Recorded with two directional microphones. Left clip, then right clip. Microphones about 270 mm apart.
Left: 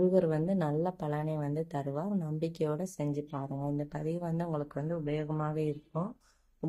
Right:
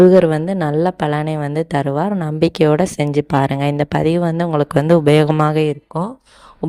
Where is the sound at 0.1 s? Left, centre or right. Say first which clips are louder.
Right 16 dB; right.